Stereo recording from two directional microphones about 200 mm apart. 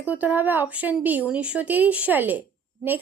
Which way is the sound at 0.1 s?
10° right (ahead or behind).